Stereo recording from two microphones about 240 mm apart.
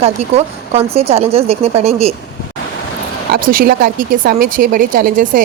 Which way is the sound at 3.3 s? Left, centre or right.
Right.